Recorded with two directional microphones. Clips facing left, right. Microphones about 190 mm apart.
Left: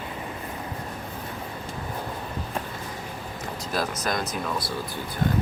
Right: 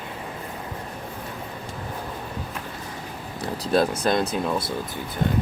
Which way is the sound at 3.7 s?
30° right (ahead or behind).